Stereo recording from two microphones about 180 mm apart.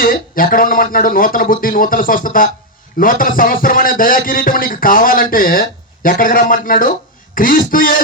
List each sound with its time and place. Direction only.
0.0 s speech: 50° left (ahead or behind)